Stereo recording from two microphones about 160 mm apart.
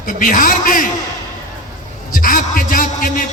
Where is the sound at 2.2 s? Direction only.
60° left (ahead or behind).